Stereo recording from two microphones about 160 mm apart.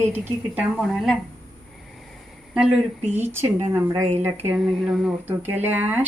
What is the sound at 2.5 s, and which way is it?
A woman's voice, 5° right (ahead or behind).